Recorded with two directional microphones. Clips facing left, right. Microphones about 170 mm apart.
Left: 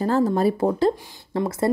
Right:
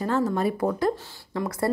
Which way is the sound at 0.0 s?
35° left (ahead or behind).